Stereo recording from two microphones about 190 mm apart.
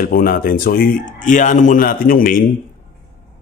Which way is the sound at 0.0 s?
50° left (ahead or behind).